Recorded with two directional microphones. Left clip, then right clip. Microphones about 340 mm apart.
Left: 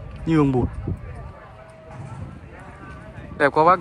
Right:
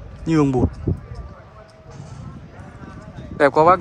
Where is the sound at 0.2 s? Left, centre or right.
Centre.